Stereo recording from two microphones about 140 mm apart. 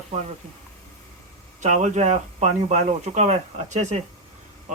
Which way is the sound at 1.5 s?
60° right (ahead or behind).